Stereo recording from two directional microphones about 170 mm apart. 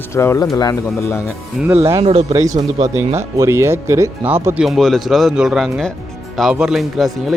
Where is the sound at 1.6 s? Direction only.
5° right (ahead or behind).